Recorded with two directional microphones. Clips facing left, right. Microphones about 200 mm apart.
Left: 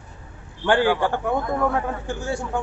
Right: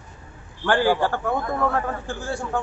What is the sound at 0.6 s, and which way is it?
A man's voice, 20° left (ahead or behind).